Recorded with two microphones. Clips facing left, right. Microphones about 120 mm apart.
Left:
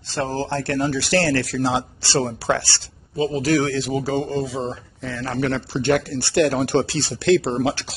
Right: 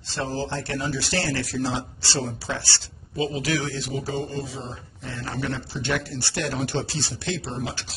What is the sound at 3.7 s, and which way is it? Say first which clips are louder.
Speech: left 7 dB; 90° left.